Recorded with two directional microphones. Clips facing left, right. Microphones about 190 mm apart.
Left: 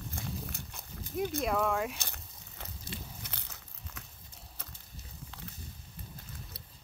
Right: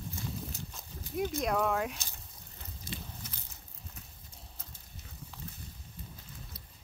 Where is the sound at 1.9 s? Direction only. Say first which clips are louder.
Left 2 dB; 65° left (ahead or behind).